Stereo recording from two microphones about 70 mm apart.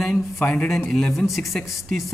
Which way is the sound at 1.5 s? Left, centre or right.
Centre.